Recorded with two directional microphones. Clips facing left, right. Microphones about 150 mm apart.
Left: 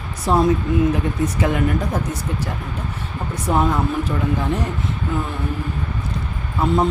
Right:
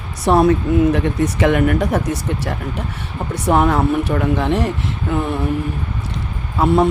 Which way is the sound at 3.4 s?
70° right (ahead or behind).